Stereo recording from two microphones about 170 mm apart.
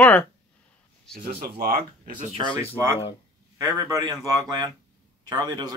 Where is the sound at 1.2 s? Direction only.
65° right (ahead or behind).